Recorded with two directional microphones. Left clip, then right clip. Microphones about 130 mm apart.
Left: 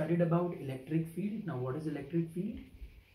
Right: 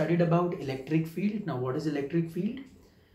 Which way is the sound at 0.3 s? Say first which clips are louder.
Right 6 dB; 20° right (ahead or behind).